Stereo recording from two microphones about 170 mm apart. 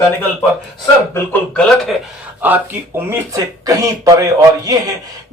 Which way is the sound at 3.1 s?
20° right (ahead or behind).